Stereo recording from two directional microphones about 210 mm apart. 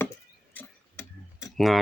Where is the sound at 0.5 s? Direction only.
10° left (ahead or behind).